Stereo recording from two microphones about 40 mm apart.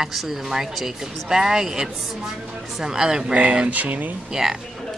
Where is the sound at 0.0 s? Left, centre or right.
Centre.